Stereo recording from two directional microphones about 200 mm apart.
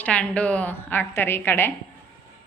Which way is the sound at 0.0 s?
5° left (ahead or behind).